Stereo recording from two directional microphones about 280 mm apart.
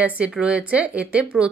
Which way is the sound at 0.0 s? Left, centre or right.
Centre.